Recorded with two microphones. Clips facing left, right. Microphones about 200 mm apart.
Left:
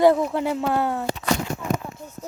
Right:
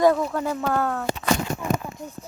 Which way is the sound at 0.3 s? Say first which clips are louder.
Left 2 dB; 20° left (ahead or behind).